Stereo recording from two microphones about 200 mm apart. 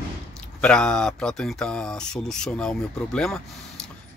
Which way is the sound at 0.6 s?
5° left (ahead or behind).